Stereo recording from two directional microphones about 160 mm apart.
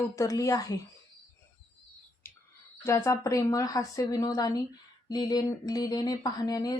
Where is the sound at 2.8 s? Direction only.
20° left (ahead or behind).